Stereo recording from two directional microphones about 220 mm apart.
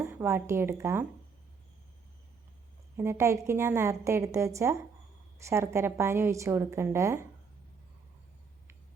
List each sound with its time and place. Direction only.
0.0 s speech: 10° right (ahead or behind)
3.0 s a woman's voice: 10° right (ahead or behind)